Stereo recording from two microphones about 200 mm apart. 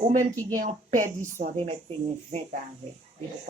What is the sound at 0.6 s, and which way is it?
Speech, 40° right (ahead or behind).